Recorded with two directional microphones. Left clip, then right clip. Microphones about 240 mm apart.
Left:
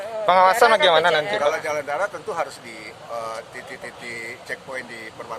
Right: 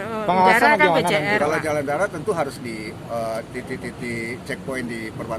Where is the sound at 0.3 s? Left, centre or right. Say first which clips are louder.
Left 1 dB; left.